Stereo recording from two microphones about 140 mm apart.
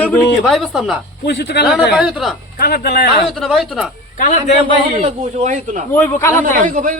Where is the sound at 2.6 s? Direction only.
90° left.